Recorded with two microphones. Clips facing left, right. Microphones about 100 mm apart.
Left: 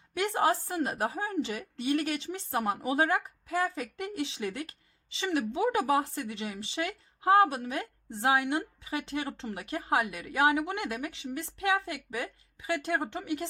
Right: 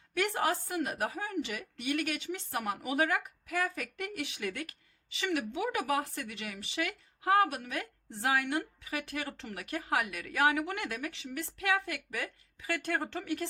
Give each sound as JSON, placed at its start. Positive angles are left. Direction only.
{"t": 0.1, "sound": "a woman's voice", "side_deg": 20}